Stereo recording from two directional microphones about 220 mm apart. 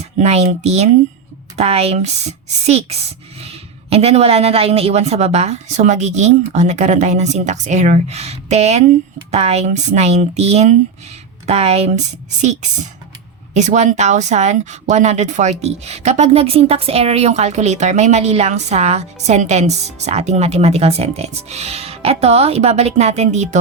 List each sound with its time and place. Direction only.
0.0 s speech: 30° right (ahead or behind)